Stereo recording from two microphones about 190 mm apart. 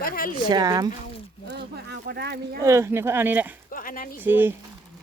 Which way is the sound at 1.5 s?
60° right (ahead or behind).